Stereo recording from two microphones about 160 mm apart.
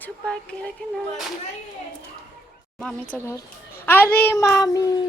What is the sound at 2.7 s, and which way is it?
A woman's voice, 10° left (ahead or behind).